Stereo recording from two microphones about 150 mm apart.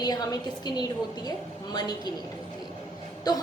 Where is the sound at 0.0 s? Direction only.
25° left (ahead or behind).